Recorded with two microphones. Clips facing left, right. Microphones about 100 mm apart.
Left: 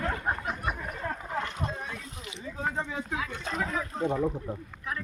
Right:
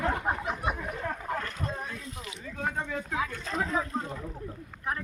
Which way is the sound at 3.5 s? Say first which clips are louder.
Right 3 dB; 30° right (ahead or behind).